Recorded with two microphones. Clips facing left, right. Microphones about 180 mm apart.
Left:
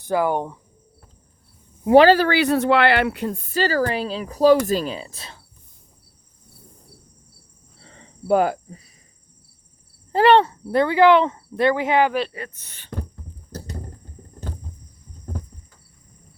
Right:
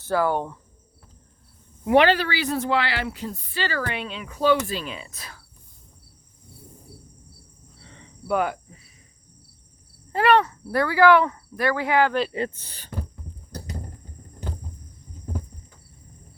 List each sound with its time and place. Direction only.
0.0 s speech: 15° left (ahead or behind)
1.9 s speech: 35° left (ahead or behind)
2.3 s speech: 65° left (ahead or behind); by 5.4 s 25° left (ahead or behind)
7.8 s cricket: 35° left (ahead or behind)
10.1 s speech: 30° left (ahead or behind)
12.3 s speech: 25° right (ahead or behind)